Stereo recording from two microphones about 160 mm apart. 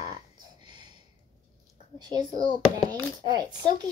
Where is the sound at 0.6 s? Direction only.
30° right (ahead or behind).